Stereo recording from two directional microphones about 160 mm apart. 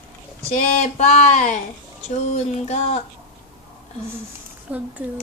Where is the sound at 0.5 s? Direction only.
45° left (ahead or behind).